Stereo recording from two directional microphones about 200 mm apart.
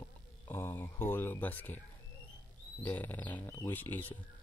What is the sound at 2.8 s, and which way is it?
Speech, 10° left (ahead or behind).